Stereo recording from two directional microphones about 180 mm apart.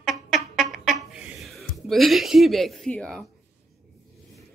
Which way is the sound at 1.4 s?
Centre (ahead or behind).